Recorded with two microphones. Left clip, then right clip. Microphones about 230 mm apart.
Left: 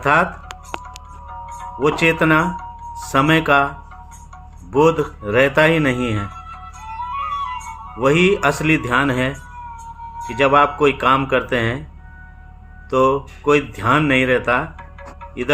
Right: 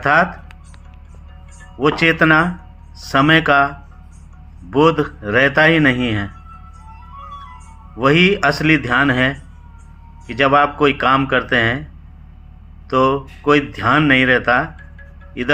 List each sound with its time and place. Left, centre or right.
0.0 s speech: centre
1.8 s speech: centre
7.1 s music: left
7.9 s speech: centre
12.9 s speech: centre